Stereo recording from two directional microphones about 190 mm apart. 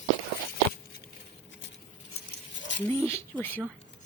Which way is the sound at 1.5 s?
70° left (ahead or behind).